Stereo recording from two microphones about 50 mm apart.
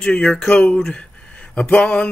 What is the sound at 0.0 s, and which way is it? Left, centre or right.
Speech, centre.